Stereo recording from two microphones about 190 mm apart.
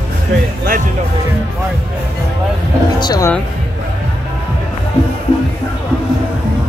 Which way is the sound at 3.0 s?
20° left (ahead or behind).